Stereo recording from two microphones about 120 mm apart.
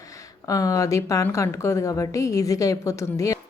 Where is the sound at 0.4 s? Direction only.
30° left (ahead or behind).